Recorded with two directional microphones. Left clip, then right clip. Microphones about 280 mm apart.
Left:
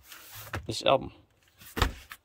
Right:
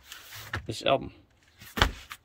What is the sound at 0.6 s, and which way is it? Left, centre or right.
Speech, centre.